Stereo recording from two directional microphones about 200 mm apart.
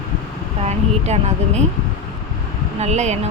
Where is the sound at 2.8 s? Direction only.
35° right (ahead or behind).